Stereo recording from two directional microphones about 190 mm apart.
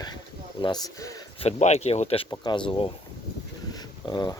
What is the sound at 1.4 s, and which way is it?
Speech, 35° left (ahead or behind).